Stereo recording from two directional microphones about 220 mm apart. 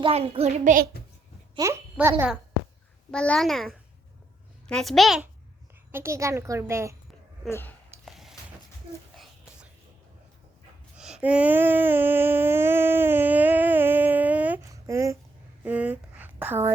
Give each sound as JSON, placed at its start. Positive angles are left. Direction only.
{"t": 0.0, "sound": "child singing", "side_deg": -25}
{"t": 1.5, "sound": "a woman's voice", "side_deg": -10}
{"t": 3.1, "sound": "a child's voice", "side_deg": 5}
{"t": 5.9, "sound": "a woman's voice", "side_deg": -10}
{"t": 7.5, "sound": "speech", "side_deg": 10}
{"t": 8.0, "sound": "a sound", "side_deg": 0}
{"t": 11.2, "sound": "child singing", "side_deg": -5}
{"t": 15.6, "sound": "speech", "side_deg": -5}